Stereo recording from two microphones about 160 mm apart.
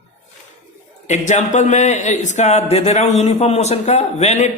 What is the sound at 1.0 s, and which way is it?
A man's voice, 45° left (ahead or behind).